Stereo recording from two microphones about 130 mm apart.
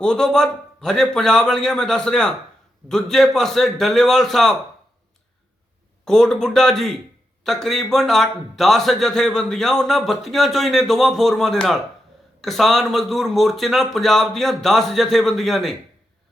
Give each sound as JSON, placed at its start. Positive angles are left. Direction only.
{"t": 0.0, "sound": "a man's voice", "side_deg": 5}
{"t": 6.1, "sound": "a man's voice", "side_deg": 5}